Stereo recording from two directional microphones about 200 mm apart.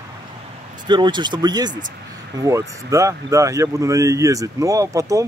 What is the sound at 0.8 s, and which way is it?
Speech, 20° right (ahead or behind).